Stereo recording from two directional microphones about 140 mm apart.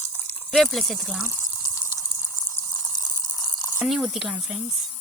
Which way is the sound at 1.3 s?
20° left (ahead or behind).